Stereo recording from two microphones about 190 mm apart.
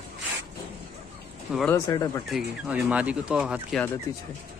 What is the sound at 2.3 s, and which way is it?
Speech, 5° right (ahead or behind).